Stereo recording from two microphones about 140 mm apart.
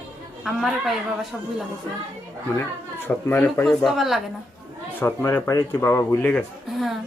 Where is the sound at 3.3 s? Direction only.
15° left (ahead or behind).